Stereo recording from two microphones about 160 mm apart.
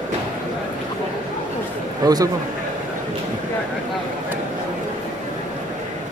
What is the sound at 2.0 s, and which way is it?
Speech, 25° right (ahead or behind).